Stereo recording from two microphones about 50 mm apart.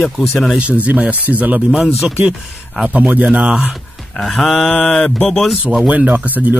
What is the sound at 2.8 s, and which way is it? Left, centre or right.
Speech, right.